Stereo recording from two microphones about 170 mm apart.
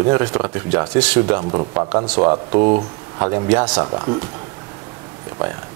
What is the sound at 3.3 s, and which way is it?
Speech, 20° right (ahead or behind).